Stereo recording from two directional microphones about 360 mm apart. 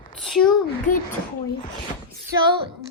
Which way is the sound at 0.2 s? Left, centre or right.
Centre.